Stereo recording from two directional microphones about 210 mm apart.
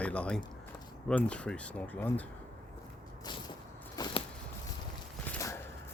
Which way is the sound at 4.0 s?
20° left (ahead or behind).